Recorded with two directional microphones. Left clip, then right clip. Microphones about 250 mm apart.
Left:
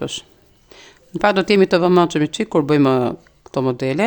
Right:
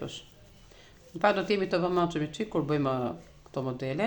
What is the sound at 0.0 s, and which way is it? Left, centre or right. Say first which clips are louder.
Speech: left 13 dB; left.